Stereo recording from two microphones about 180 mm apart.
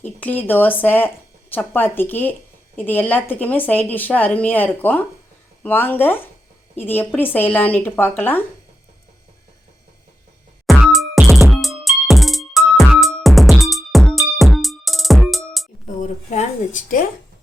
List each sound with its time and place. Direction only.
0.0 s speech: 10° left (ahead or behind)
10.7 s music: centre (ahead or behind)
16.0 s a sound: 40° left (ahead or behind)